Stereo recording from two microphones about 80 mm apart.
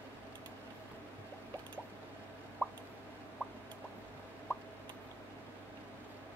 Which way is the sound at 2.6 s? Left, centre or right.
Centre.